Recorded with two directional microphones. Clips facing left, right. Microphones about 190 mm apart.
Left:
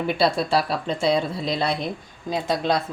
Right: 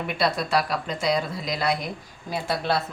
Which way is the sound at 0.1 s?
30° left (ahead or behind).